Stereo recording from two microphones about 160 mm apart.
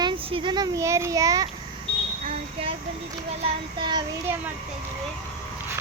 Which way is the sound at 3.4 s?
30° right (ahead or behind).